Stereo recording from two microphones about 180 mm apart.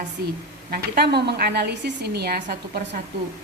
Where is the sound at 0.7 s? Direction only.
60° right (ahead or behind).